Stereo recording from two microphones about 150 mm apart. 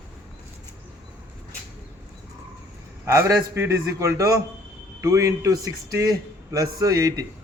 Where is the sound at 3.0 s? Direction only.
20° right (ahead or behind).